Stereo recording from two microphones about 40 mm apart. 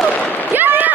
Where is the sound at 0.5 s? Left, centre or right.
Right.